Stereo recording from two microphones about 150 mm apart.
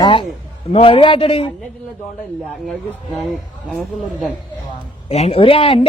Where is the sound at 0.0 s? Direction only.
35° left (ahead or behind).